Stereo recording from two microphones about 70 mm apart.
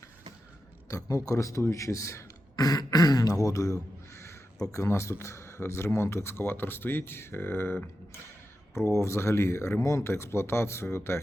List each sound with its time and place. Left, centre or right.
0.9 s speech: left
2.6 s speech: left